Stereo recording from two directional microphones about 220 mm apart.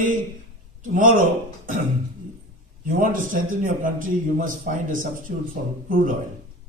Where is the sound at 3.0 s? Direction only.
35° right (ahead or behind).